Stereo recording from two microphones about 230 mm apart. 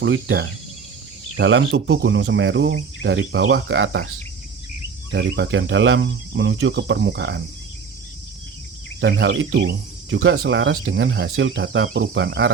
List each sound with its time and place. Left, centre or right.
0.0 s speech: right
5.1 s speech: right
9.0 s cricket: right
10.4 s speech: right